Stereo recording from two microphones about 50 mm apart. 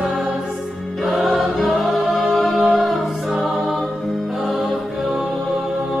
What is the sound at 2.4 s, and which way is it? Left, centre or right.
Music, centre.